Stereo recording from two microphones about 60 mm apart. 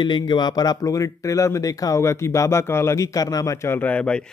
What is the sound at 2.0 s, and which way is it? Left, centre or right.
Speech, left.